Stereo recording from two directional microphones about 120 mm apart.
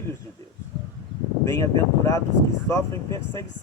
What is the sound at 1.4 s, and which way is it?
Speech, 25° left (ahead or behind).